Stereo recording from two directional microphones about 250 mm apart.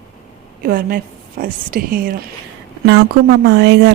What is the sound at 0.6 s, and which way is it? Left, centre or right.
A woman's voice, right.